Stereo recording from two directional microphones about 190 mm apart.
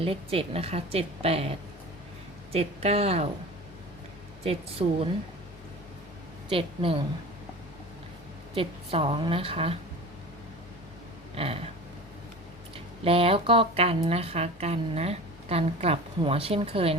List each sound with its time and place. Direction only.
0.0 s speech: 30° right (ahead or behind)
4.4 s speech: 30° right (ahead or behind)
6.5 s a woman's voice: 30° right (ahead or behind)
8.5 s a woman's voice: 30° right (ahead or behind)
11.3 s speech: 30° right (ahead or behind)
12.7 s speech: 30° right (ahead or behind)